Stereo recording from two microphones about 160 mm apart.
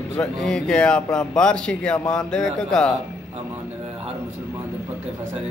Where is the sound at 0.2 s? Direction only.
5° left (ahead or behind).